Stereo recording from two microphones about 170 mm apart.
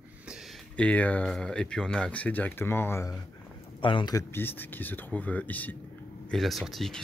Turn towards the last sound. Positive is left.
turn(degrees=0)  # may be behind; listen again after turning